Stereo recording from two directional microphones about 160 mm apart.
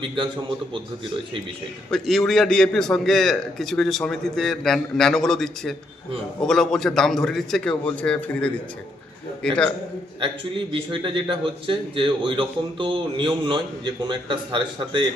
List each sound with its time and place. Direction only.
1.9 s a man's voice: centre (ahead or behind)
10.7 s speech: 30° right (ahead or behind)